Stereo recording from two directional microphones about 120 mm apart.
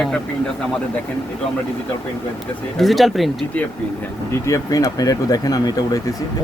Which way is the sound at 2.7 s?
Centre (ahead or behind).